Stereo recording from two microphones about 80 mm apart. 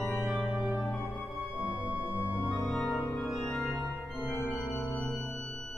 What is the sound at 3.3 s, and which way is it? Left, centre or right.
Music, centre.